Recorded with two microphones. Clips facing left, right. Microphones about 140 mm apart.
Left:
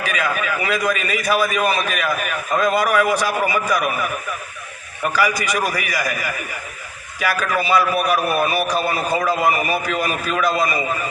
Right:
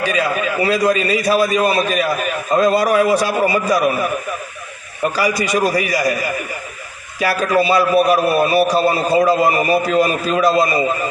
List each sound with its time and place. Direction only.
0.0 s a man's voice: 30° right (ahead or behind)